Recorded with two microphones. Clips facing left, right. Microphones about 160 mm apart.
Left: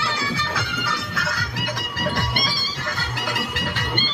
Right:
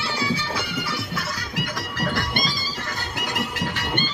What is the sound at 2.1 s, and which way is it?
Music, 45° left (ahead or behind).